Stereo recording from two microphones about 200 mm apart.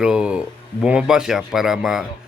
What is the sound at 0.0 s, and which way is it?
Speech, 5° right (ahead or behind).